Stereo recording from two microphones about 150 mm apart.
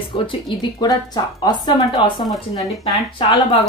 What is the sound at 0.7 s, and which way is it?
A woman's voice, 25° left (ahead or behind).